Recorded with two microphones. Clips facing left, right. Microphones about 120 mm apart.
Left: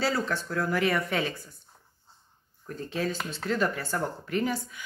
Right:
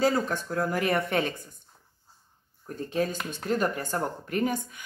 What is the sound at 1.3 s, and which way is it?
Speech, 20° right (ahead or behind).